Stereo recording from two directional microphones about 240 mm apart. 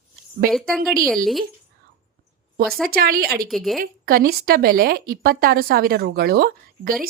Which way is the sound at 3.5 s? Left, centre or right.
Centre.